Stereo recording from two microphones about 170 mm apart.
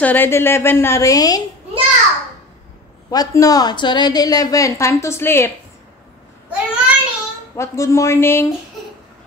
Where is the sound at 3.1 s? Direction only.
20° left (ahead or behind).